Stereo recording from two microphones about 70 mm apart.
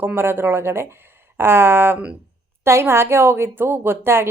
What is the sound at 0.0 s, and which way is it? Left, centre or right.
A woman's voice, right.